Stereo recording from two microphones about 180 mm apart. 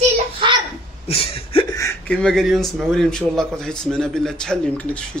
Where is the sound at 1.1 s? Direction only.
30° left (ahead or behind).